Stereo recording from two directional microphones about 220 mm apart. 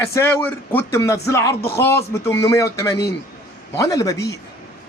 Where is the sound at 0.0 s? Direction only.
10° left (ahead or behind).